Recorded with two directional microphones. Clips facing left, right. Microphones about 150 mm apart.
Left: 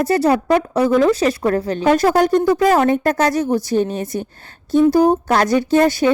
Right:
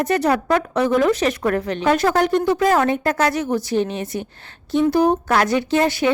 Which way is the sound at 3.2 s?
40° left (ahead or behind).